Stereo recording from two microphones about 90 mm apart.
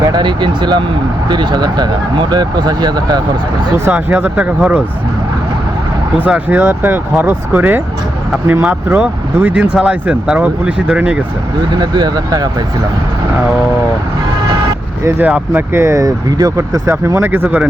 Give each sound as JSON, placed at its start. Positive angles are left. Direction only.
{"t": 0.0, "sound": "speech", "side_deg": -50}
{"t": 3.8, "sound": "speech", "side_deg": -20}
{"t": 6.1, "sound": "speech", "side_deg": -15}
{"t": 9.0, "sound": "speech", "side_deg": -15}
{"t": 11.7, "sound": "speech", "side_deg": -50}
{"t": 15.2, "sound": "speech", "side_deg": -20}